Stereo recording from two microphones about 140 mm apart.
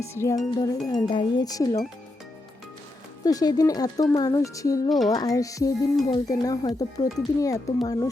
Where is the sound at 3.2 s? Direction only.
25° left (ahead or behind).